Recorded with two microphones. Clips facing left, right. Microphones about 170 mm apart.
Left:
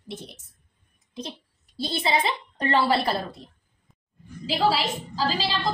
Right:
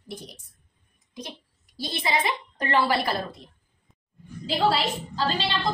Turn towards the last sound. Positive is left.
turn(degrees=0)  # may be behind; listen again after turning